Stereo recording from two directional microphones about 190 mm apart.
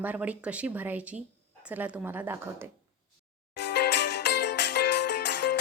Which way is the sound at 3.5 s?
65° left (ahead or behind).